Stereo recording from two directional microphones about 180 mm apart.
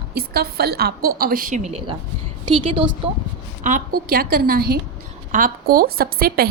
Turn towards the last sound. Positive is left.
turn(degrees=-55)  # may be behind; listen again after turning